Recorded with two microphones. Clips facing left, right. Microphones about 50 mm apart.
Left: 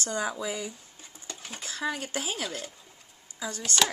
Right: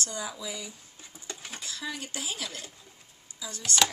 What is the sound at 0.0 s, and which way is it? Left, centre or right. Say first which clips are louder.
Speech: left 5 dB; left.